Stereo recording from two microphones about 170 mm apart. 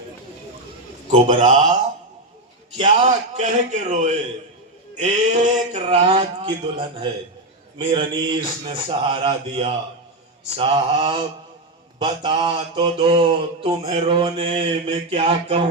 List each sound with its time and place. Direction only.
1.0 s a man's voice: 45° right (ahead or behind)
6.0 s speech: 30° right (ahead or behind)
10.5 s mantra: 30° right (ahead or behind)